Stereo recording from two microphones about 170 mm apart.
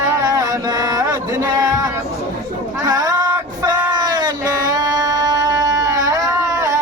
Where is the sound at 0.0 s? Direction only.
20° right (ahead or behind).